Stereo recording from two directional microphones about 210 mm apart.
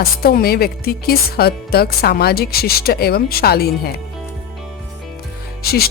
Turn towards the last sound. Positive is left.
turn(degrees=45)  # may be behind; listen again after turning